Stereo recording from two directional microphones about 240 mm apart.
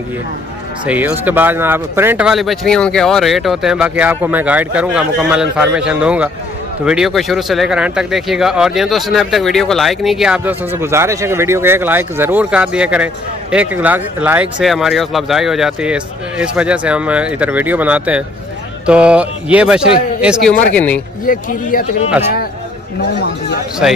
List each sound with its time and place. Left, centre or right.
0.8 s speech: centre
21.3 s speech: left
23.8 s speech: centre